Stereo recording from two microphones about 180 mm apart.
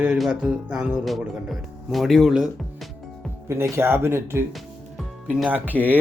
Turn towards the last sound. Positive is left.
turn(degrees=-10)  # may be behind; listen again after turning